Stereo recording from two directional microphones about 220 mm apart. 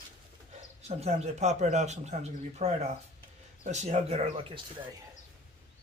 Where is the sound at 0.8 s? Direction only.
30° right (ahead or behind).